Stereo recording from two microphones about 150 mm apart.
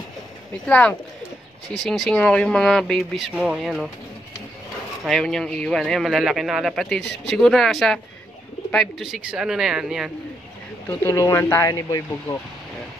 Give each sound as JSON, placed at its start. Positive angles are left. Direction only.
{"t": 0.7, "sound": "speech", "side_deg": 10}
{"t": 5.0, "sound": "speech", "side_deg": 5}
{"t": 10.9, "sound": "speech", "side_deg": 20}